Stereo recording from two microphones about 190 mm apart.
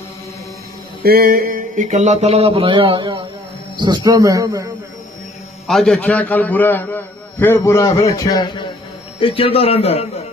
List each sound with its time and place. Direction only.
1.0 s a man's voice: 50° right (ahead or behind); by 4.6 s 20° right (ahead or behind)
5.7 s a man's voice: 5° left (ahead or behind); by 10.2 s 35° left (ahead or behind)